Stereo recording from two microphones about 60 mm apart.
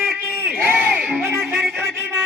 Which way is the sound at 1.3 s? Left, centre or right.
Centre.